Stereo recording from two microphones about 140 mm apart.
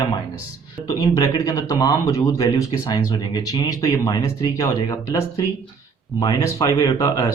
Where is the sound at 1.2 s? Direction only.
25° left (ahead or behind).